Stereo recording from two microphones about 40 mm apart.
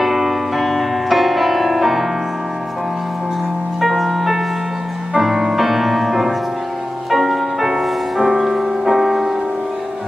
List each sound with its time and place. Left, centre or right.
0.0 s music: centre
3.8 s music: centre